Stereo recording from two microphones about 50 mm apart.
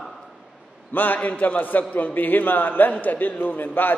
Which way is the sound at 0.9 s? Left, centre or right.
Left.